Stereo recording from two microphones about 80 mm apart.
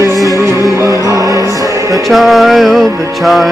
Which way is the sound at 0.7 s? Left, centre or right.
Right.